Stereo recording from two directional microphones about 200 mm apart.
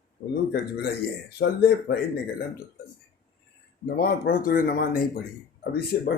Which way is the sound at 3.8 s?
50° left (ahead or behind).